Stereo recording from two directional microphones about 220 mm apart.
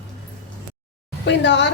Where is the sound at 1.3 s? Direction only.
50° left (ahead or behind).